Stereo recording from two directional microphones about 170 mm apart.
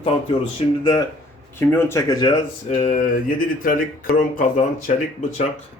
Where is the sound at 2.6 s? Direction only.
45° left (ahead or behind).